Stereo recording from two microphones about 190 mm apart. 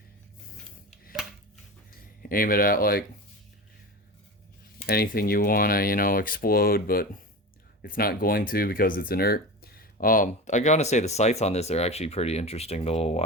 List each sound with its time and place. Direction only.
2.3 s speech: 50° left (ahead or behind)
4.9 s speech: 50° left (ahead or behind); by 13.2 s 35° left (ahead or behind)